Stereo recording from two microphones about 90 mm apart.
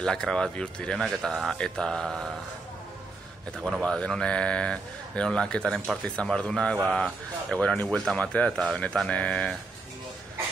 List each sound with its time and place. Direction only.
0.0 s speech: 5° left (ahead or behind)
3.8 s speech: 10° left (ahead or behind)